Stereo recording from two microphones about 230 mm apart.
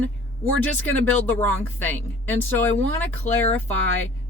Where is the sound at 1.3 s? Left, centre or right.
Centre.